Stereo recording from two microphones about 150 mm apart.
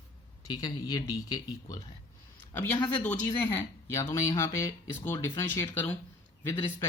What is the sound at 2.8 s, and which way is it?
Speech, 10° left (ahead or behind).